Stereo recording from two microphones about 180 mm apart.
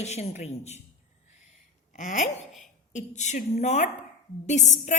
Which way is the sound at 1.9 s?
45° left (ahead or behind).